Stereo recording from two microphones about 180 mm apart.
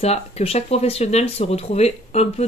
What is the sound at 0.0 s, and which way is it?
Speech, 35° left (ahead or behind).